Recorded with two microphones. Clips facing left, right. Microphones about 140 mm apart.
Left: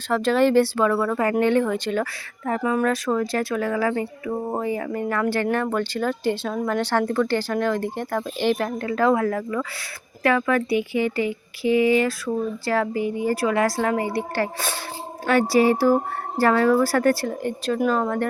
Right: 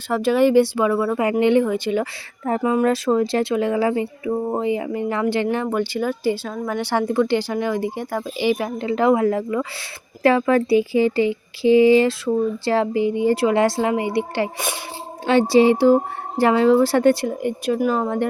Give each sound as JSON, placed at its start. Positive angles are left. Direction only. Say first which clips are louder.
{"t": 0.1, "sound": "speech", "louder": "right 2 dB", "side_deg": -10}
{"t": 2.4, "sound": "speech", "louder": "right 3 dB", "side_deg": -25}
{"t": 17.2, "sound": "speech", "louder": "right 3 dB", "side_deg": -10}